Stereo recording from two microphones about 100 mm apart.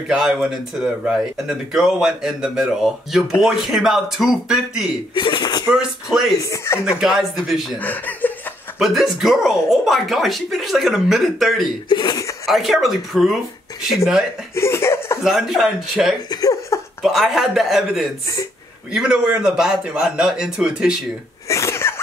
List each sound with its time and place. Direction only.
0.2 s speech: 5° right (ahead or behind)
5.1 s a sound: 50° left (ahead or behind)
6.4 s speech: 30° left (ahead or behind)
7.0 s speech: 5° right (ahead or behind)
7.8 s speech: 15° left (ahead or behind)
8.7 s speech: 5° right (ahead or behind)
11.9 s speech: 45° left (ahead or behind)
12.4 s speech: centre (ahead or behind)
14.5 s laughter: 25° left (ahead or behind)
15.2 s speech: 5° right (ahead or behind)
16.3 s laughter: 40° left (ahead or behind)
17.0 s a man's voice: centre (ahead or behind)
21.5 s sneeze: 30° left (ahead or behind)